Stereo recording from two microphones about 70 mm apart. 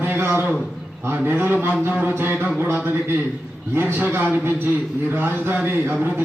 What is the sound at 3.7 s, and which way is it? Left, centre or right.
A man's voice, right.